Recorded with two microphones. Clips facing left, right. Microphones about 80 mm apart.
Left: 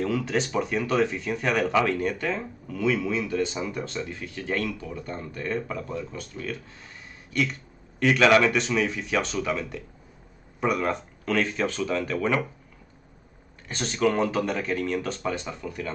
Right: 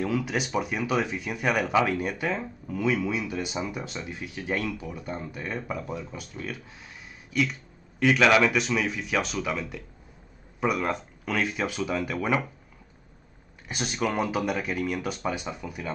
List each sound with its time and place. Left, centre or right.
0.0 s speech: centre
13.7 s speech: centre